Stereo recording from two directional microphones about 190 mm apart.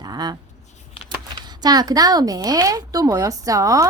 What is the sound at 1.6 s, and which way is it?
A woman's voice, 20° right (ahead or behind).